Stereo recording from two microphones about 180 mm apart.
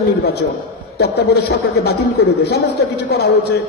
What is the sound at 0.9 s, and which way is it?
A man's voice, 65° left (ahead or behind).